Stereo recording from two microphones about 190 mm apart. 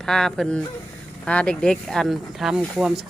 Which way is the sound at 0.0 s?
5° left (ahead or behind).